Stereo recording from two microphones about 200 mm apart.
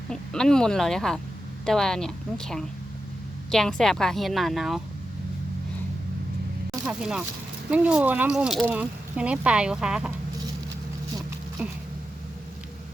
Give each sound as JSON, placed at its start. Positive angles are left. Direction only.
{"t": 0.1, "sound": "speech", "side_deg": 5}
{"t": 6.8, "sound": "speech", "side_deg": -5}
{"t": 11.6, "sound": "a sound", "side_deg": -5}